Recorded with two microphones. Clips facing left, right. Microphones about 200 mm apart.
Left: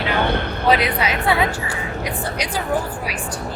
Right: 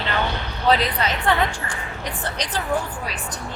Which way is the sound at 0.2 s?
55° left (ahead or behind).